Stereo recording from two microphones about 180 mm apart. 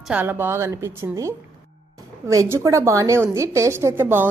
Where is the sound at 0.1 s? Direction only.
10° right (ahead or behind).